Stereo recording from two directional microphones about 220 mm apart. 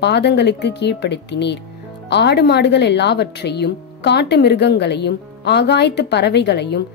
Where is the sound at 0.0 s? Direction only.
50° left (ahead or behind).